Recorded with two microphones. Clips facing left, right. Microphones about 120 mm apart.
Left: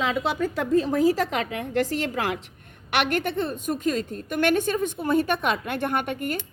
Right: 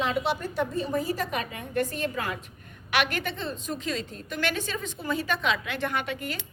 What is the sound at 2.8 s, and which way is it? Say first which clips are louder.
A woman's voice: left 3 dB; 60° left (ahead or behind).